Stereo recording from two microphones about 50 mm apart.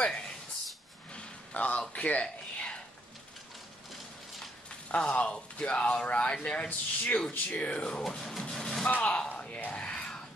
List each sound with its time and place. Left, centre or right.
1.1 s a sound: left
2.0 s speech: left
2.5 s a sound: left
4.8 s speech: left
8.2 s speech: centre
8.5 s music: centre
8.8 s speech: left
9.4 s music: left